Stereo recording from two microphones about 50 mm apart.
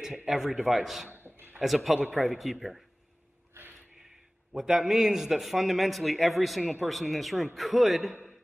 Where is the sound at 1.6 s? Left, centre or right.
Centre.